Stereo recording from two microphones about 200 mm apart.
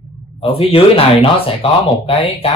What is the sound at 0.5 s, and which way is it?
Speech, 30° left (ahead or behind).